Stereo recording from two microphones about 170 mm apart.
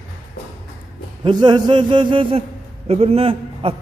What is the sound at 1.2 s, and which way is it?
A man's voice, 25° right (ahead or behind).